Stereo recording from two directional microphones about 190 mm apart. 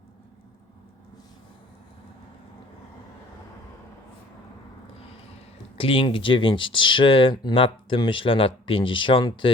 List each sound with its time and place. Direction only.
5.7 s speech: 30° left (ahead or behind)